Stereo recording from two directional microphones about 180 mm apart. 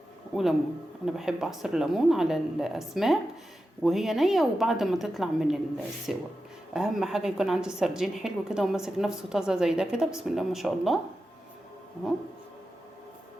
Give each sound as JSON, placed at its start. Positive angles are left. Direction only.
{"t": 0.3, "sound": "a woman's voice", "side_deg": -5}